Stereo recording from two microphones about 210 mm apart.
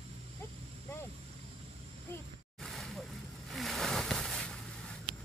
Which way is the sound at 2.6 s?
Centre (ahead or behind).